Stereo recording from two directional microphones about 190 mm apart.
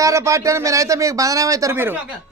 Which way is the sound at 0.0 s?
15° right (ahead or behind).